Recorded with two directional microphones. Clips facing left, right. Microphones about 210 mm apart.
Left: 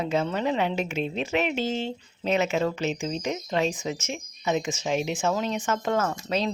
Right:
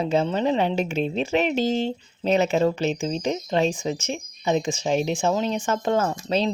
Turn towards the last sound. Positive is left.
turn(degrees=-30)  # may be behind; listen again after turning